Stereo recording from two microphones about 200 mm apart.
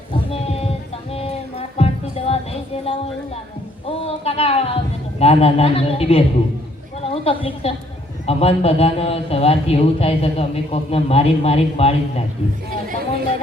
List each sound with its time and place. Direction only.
0.3 s a sound: 30° left (ahead or behind)
1.1 s music: 30° left (ahead or behind)
3.8 s a man's voice: 30° left (ahead or behind)